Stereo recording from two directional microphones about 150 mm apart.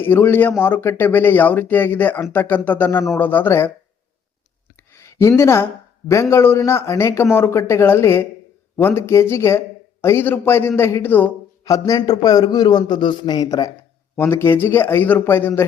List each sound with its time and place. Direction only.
0.0 s speech: 15° left (ahead or behind)
4.9 s a sound: 15° left (ahead or behind)
5.4 s a man's voice: 20° left (ahead or behind)